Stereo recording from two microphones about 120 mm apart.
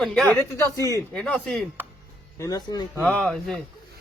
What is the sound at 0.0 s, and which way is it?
Speech, 5° left (ahead or behind).